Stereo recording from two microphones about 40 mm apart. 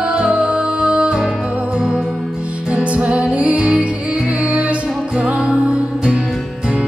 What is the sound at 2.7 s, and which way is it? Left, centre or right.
Music, right.